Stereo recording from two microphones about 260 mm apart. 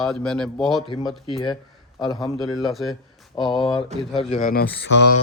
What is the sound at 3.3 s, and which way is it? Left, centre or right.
Speech, centre.